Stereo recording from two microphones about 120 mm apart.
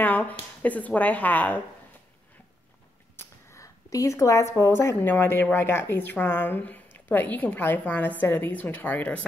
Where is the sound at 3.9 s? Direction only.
25° left (ahead or behind).